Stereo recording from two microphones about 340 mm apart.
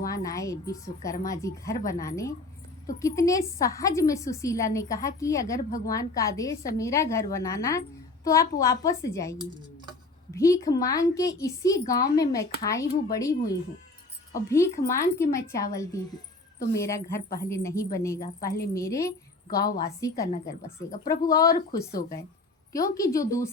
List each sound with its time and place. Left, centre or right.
0.1 s a woman's voice: centre
18.2 s a woman's voice: left
18.7 s a woman's voice: centre
19.6 s a woman's voice: left
20.0 s a woman's voice: centre